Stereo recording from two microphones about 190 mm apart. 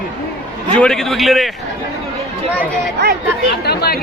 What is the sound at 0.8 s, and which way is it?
Speech, centre (ahead or behind).